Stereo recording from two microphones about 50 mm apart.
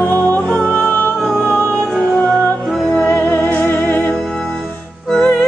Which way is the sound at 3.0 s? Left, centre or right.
Left.